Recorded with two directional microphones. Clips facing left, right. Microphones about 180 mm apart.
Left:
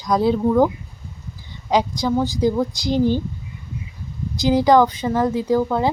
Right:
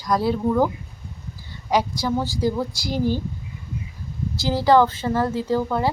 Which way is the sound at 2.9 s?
5° right (ahead or behind).